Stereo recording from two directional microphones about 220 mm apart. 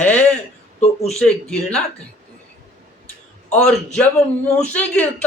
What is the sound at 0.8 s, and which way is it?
Speech, 30° left (ahead or behind).